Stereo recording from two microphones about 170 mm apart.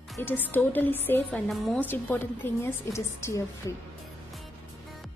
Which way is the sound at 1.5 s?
Centre (ahead or behind).